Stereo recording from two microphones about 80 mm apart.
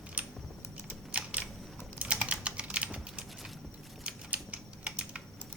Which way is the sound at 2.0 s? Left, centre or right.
Centre.